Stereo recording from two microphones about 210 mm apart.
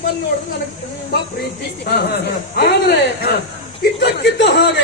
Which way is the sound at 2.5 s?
50° left (ahead or behind).